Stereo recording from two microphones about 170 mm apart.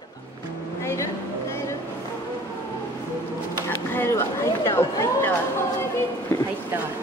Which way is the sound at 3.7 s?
15° left (ahead or behind).